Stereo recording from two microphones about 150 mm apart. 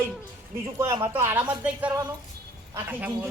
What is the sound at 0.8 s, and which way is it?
Speech, 20° right (ahead or behind).